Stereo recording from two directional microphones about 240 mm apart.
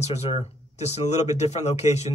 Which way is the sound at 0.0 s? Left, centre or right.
Left.